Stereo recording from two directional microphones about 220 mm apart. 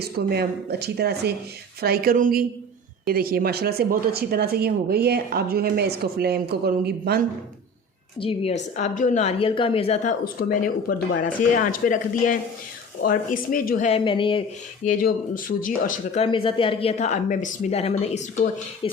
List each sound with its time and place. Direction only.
0.0 s a woman's voice: 45° right (ahead or behind)
8.2 s a woman's voice: 25° left (ahead or behind)
14.8 s a woman's voice: 40° left (ahead or behind)
16.2 s a woman's voice: 25° left (ahead or behind)